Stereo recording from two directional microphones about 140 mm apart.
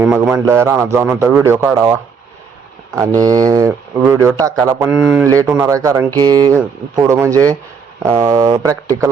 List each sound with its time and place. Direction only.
0.0 s a man's voice: 10° right (ahead or behind)
3.2 s speech: 25° right (ahead or behind)
4.9 s a man's voice: 10° right (ahead or behind)
5.2 s speech: 25° right (ahead or behind)